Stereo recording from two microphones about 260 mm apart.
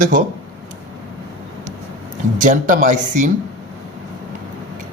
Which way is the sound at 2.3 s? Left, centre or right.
Right.